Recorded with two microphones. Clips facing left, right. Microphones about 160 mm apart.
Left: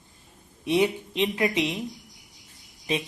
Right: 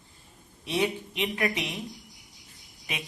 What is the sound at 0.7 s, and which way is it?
A woman's voice, 20° left (ahead or behind).